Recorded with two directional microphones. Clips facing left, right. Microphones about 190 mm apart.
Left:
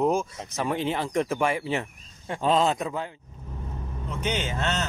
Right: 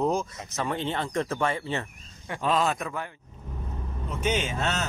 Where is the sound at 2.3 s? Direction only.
25° left (ahead or behind).